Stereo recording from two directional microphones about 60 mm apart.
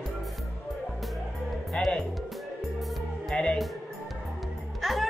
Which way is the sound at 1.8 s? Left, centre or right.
Centre.